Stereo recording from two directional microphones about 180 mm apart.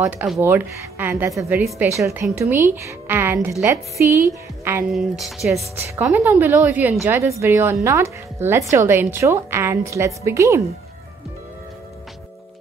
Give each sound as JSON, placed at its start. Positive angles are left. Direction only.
{"t": 0.0, "sound": "speech", "side_deg": 0}
{"t": 0.4, "sound": "a woman's voice", "side_deg": -10}
{"t": 4.9, "sound": "a woman's voice", "side_deg": 0}